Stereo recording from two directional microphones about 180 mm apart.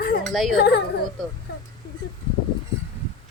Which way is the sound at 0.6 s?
65° left (ahead or behind).